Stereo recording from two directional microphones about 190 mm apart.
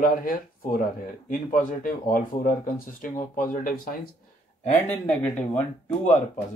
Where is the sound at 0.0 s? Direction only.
45° left (ahead or behind).